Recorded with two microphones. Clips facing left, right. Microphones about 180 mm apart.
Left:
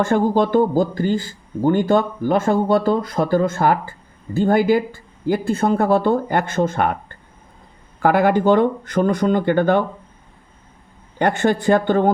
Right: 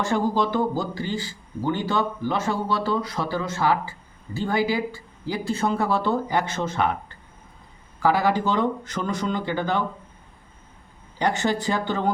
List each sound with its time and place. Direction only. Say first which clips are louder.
0.0 s speech: left 6 dB; 50° left (ahead or behind)
11.2 s speech: left 6 dB; 55° left (ahead or behind)